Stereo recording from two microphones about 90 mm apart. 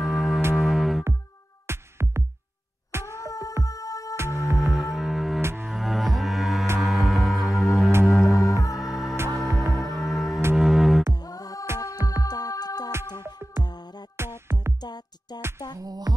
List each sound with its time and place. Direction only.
0.0 s music: centre (ahead or behind)
1.7 s music: 30° right (ahead or behind)
3.3 s music: 40° left (ahead or behind)
4.6 s music: centre (ahead or behind)
5.4 s music: 30° right (ahead or behind)
5.7 s music: centre (ahead or behind)
11.1 s music: 45° left (ahead or behind)
14.1 s music: 25° right (ahead or behind)
14.8 s music: 50° left (ahead or behind)
15.8 s music: 45° right (ahead or behind)